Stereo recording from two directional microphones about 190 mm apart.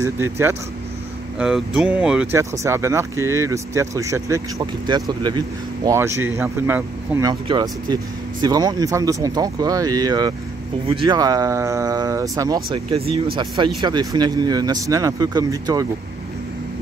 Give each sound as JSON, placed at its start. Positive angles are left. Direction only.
{"t": 0.0, "sound": "speech", "side_deg": -10}
{"t": 12.7, "sound": "speech", "side_deg": -30}